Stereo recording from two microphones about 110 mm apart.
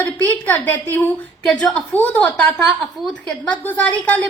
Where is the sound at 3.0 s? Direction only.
Centre (ahead or behind).